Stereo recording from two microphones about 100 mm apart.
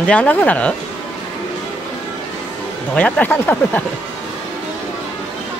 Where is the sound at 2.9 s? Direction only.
15° left (ahead or behind).